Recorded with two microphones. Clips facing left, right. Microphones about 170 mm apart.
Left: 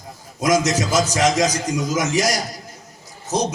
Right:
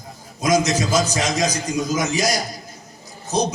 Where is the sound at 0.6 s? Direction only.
90° left.